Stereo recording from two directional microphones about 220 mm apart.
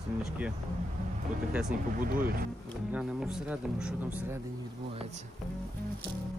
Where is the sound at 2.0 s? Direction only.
40° right (ahead or behind).